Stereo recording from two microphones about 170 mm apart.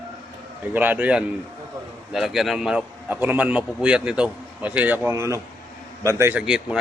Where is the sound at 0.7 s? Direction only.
10° right (ahead or behind).